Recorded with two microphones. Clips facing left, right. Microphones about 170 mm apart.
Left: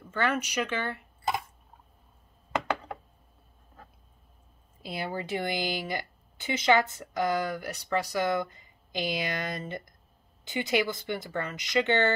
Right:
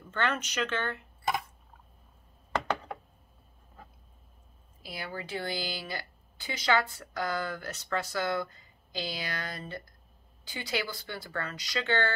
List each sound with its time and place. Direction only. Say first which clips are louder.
0.1 s speech: left 3 dB; 10° left (ahead or behind)
4.8 s speech: left 6 dB; 25° left (ahead or behind)